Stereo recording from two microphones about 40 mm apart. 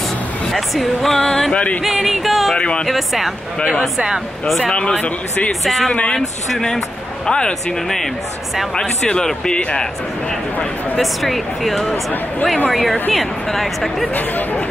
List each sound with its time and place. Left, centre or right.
0.5 s speech: centre
1.5 s music: left
1.8 s music: centre
2.5 s speech: left
4.7 s a man's voice: left
7.2 s a man's voice: left
8.7 s a man's voice: left
11.0 s speech: centre
11.9 s speech: left
12.6 s speech: centre
14.1 s speech: left